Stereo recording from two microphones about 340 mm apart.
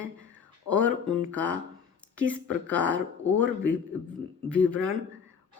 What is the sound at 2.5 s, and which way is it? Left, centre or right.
Speech, right.